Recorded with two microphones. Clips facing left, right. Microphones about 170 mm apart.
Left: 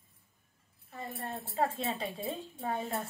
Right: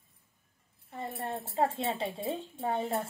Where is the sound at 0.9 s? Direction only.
25° right (ahead or behind).